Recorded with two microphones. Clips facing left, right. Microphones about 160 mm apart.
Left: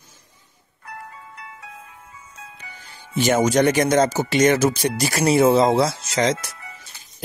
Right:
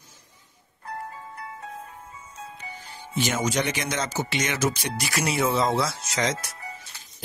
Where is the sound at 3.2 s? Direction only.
45° left (ahead or behind).